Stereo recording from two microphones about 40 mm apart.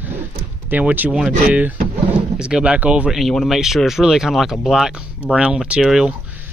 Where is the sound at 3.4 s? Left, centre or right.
Centre.